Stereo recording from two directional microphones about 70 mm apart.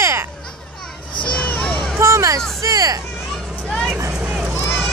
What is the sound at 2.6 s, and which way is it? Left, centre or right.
Speech, right.